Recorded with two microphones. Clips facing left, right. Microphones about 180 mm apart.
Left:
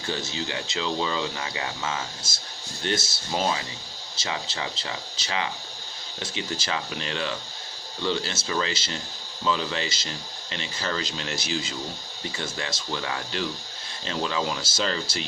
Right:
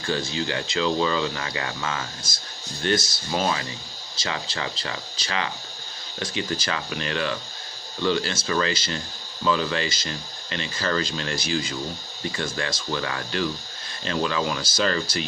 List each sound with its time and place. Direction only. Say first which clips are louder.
0.0 s speech: right 4 dB; 20° left (ahead or behind)